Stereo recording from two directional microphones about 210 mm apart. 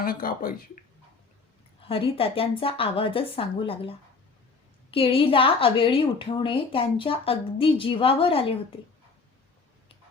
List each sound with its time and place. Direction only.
0.0 s speech: 45° left (ahead or behind)
1.9 s a woman's voice: 25° left (ahead or behind)